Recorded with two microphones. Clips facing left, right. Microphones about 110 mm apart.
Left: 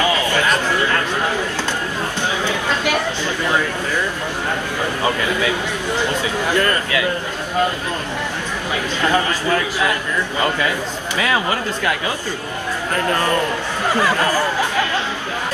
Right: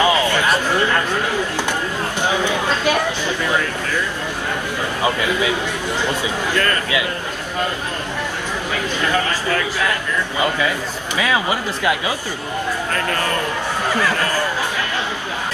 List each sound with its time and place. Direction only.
0.0 s a sound: 15° right (ahead or behind)
6.5 s a man's voice: 20° left (ahead or behind)
9.1 s a man's voice: 20° left (ahead or behind)
11.1 s speech: 15° right (ahead or behind)
13.9 s speech: 15° left (ahead or behind)